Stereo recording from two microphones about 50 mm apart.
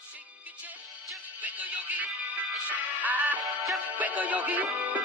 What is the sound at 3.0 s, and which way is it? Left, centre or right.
Music, right.